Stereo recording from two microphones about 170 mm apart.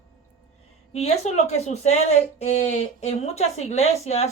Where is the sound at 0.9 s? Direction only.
40° left (ahead or behind).